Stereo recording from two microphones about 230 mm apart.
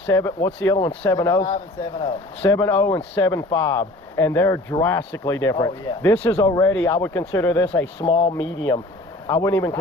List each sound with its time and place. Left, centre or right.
0.1 s speech: centre
1.5 s speech: left
2.4 s speech: centre
7.9 s speech: left
8.4 s speech: centre